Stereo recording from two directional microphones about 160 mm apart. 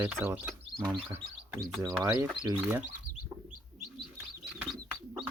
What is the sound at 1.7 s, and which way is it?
Speech, 5° left (ahead or behind).